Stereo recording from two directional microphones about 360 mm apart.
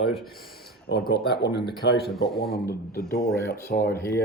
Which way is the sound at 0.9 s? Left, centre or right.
Left.